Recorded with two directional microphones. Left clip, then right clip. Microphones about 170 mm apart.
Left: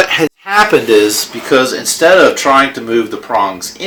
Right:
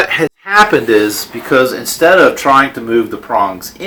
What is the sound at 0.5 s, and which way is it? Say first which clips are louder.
Speech: even; 30° left (ahead or behind).